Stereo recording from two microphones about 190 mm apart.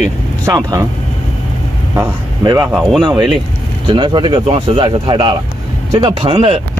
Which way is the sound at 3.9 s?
25° right (ahead or behind).